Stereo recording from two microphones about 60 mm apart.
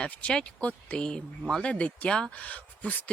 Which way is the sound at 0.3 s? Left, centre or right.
Centre.